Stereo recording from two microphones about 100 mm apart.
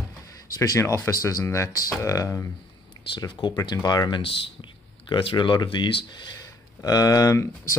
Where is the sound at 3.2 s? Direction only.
45° left (ahead or behind).